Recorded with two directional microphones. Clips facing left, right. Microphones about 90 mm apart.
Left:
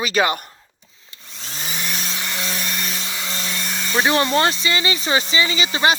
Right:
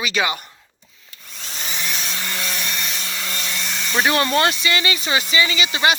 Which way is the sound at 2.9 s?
20° left (ahead or behind).